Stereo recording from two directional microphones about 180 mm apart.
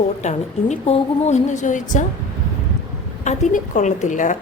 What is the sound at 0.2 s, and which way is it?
A woman's voice, 40° left (ahead or behind).